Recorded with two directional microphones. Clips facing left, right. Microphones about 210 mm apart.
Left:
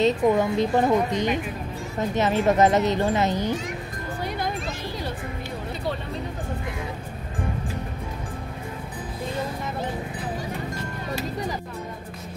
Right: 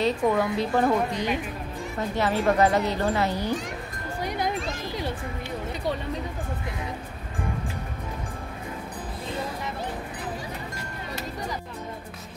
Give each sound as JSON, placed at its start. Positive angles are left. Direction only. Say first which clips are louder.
{"t": 0.0, "sound": "speech", "louder": "left 3 dB", "side_deg": 20}